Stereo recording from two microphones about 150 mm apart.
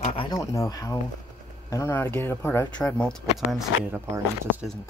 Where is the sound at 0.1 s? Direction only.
35° left (ahead or behind).